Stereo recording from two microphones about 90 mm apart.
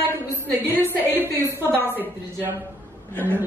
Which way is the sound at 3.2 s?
20° right (ahead or behind).